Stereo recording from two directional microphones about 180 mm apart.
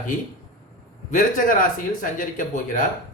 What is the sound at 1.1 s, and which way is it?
A man's voice, 45° left (ahead or behind).